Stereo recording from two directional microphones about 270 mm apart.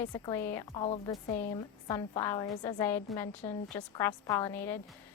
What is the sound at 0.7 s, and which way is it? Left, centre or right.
A woman's voice, centre.